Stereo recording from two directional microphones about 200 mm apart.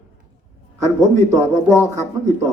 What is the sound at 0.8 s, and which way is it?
A man's voice, 15° left (ahead or behind).